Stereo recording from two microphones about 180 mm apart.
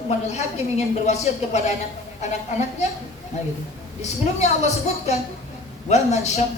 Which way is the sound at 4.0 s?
40° left (ahead or behind).